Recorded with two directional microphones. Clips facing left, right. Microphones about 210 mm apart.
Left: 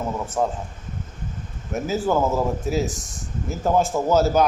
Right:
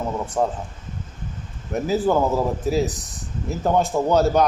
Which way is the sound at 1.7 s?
Centre (ahead or behind).